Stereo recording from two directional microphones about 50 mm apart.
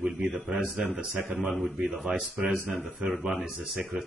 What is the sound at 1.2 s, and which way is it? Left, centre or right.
Speech, right.